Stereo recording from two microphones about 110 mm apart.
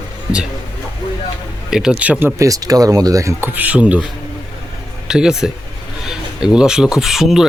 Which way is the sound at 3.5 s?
10° right (ahead or behind).